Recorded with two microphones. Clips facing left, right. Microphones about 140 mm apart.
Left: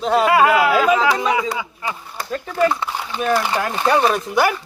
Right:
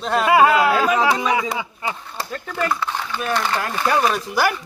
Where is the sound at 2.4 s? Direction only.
10° left (ahead or behind).